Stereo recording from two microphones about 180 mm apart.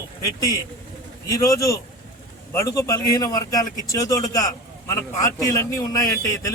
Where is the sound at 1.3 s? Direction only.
15° left (ahead or behind).